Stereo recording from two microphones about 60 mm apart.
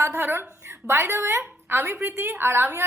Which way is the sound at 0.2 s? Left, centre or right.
Right.